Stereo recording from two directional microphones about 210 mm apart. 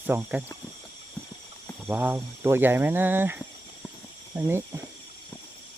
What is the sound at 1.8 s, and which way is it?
Speech, 10° right (ahead or behind).